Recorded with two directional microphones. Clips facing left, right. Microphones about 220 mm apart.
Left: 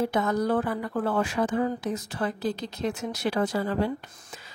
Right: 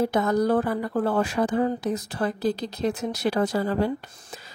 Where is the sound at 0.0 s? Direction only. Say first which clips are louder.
Right 3 dB; 40° right (ahead or behind).